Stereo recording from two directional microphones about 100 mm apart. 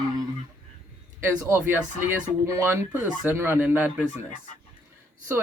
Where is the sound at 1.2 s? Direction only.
20° right (ahead or behind).